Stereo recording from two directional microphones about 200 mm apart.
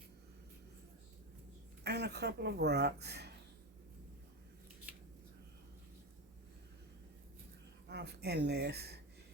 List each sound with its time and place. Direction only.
1.8 s speech: 55° right (ahead or behind)
7.9 s speech: 55° right (ahead or behind)